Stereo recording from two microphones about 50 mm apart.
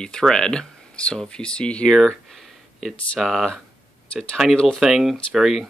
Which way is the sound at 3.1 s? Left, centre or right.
Centre.